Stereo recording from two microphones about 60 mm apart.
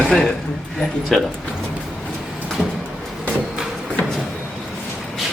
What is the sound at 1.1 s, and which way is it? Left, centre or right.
Speech, centre.